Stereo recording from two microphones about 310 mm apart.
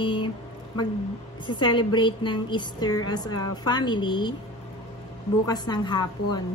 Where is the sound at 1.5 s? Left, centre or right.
Centre.